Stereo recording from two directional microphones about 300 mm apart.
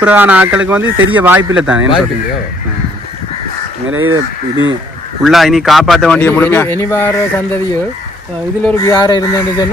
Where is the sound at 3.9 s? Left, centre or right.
Right.